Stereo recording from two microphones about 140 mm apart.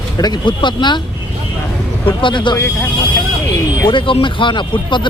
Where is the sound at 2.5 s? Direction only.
20° left (ahead or behind).